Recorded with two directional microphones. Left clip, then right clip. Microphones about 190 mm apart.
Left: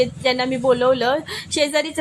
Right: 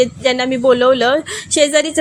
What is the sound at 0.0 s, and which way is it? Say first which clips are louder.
A woman's voice: right 4 dB; 20° right (ahead or behind).